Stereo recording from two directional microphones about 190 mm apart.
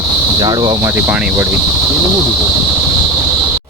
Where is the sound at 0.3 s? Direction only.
20° right (ahead or behind).